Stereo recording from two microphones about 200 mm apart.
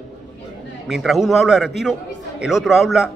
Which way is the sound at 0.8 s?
Centre (ahead or behind).